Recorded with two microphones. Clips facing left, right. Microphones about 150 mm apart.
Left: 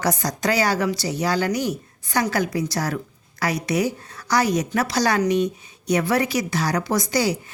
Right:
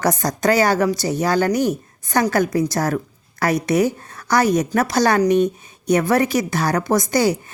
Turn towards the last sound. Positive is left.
turn(degrees=-50)  # may be behind; listen again after turning